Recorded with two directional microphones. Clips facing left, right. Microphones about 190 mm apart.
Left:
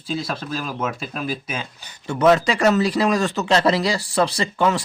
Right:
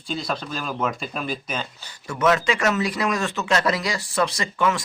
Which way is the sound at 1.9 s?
30° left (ahead or behind).